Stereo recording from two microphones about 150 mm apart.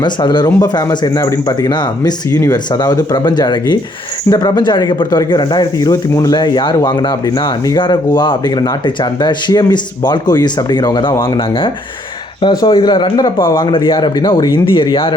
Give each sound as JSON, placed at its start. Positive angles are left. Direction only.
{"t": 0.0, "sound": "speech", "side_deg": 30}
{"t": 12.4, "sound": "speech", "side_deg": 30}